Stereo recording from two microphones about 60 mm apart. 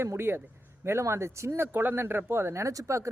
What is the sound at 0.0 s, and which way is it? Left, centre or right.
Speech, right.